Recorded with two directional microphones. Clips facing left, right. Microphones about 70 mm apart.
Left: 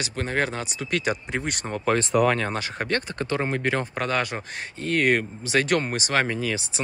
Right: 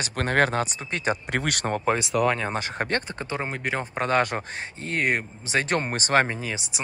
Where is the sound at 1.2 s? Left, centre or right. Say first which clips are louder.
Right 2 dB; right.